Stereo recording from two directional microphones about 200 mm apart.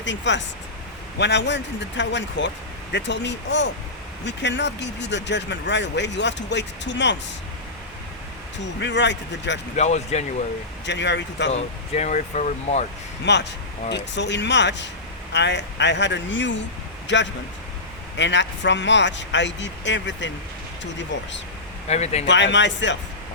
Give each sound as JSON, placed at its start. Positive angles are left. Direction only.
{"t": 0.0, "sound": "speech", "side_deg": 65}
{"t": 8.8, "sound": "speech", "side_deg": 60}
{"t": 9.7, "sound": "speech", "side_deg": 35}
{"t": 10.8, "sound": "speech", "side_deg": 60}
{"t": 11.5, "sound": "speech", "side_deg": 35}
{"t": 13.2, "sound": "speech", "side_deg": 60}
{"t": 21.8, "sound": "speech", "side_deg": 35}
{"t": 22.3, "sound": "speech", "side_deg": 65}